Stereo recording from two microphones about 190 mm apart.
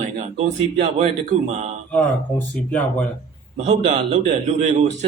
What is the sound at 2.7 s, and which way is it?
Speech, 5° left (ahead or behind).